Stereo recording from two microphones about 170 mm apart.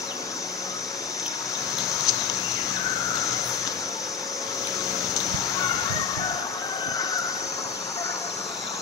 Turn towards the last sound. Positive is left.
turn(degrees=20)  # may be behind; listen again after turning